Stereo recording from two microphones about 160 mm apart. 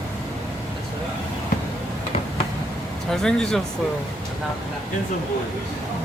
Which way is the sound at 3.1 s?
5° left (ahead or behind).